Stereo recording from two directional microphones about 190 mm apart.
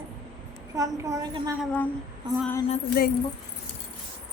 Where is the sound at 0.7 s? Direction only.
20° right (ahead or behind).